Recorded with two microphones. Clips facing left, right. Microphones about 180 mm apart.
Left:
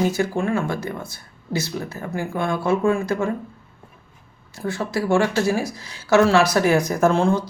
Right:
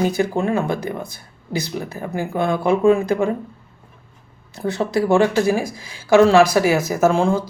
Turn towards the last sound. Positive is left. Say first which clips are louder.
# right 1 dB
turn(degrees=-10)  # may be behind; listen again after turning